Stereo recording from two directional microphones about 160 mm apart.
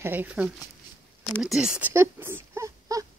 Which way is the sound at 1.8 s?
15° right (ahead or behind).